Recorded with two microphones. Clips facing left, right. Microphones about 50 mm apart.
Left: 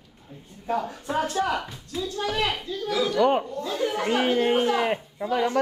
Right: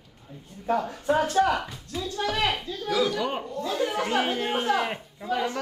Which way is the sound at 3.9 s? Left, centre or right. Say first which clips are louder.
Left 3 dB; centre.